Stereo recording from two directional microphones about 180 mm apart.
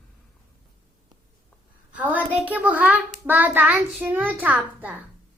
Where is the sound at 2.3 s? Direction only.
10° right (ahead or behind).